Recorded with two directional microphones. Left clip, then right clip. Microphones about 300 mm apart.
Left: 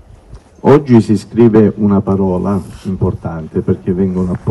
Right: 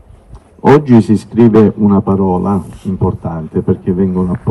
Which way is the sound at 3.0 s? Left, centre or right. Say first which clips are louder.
Right 2 dB; centre.